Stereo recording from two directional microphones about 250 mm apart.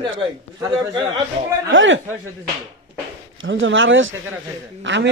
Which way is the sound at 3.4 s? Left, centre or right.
Right.